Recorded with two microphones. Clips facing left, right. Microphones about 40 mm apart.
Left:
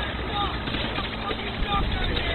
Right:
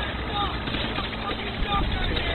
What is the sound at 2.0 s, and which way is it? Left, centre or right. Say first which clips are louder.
Speech: even; centre.